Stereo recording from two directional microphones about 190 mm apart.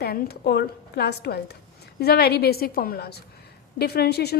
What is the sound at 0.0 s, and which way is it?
A woman's voice, 55° left (ahead or behind).